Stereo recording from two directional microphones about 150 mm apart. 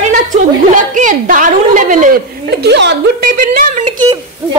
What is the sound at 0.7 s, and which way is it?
A woman's voice, 55° right (ahead or behind).